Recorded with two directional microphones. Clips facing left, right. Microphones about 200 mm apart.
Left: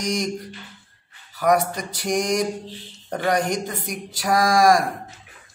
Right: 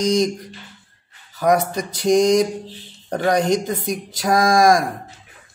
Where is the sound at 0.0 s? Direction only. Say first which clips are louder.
Right 7 dB; 20° right (ahead or behind).